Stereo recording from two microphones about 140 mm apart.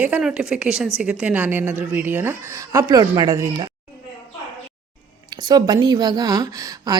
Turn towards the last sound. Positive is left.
turn(degrees=-25)  # may be behind; listen again after turning